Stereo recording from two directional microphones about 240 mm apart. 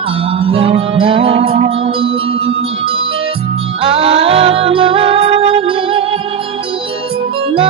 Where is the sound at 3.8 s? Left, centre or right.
Right.